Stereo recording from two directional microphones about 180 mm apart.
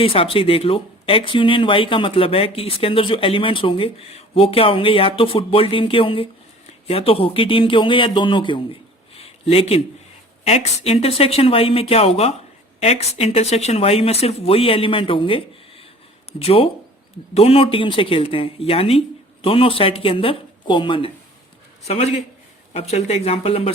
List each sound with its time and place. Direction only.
0.0 s speech: 30° left (ahead or behind)